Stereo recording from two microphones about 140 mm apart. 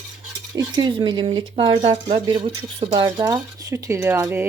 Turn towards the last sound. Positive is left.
turn(degrees=-15)  # may be behind; listen again after turning